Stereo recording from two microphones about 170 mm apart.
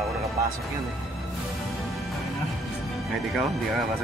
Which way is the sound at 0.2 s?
20° right (ahead or behind).